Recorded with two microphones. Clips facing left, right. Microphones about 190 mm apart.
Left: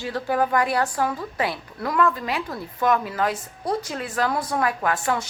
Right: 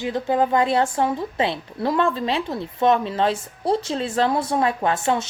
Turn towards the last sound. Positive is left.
turn(degrees=-25)  # may be behind; listen again after turning